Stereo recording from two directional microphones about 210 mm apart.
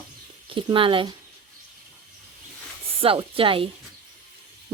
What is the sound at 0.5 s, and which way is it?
Speech, 25° right (ahead or behind).